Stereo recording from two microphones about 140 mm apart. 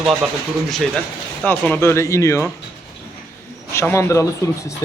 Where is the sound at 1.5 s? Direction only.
15° left (ahead or behind).